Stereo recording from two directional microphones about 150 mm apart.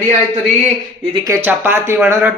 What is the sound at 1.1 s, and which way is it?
Speech, 25° right (ahead or behind).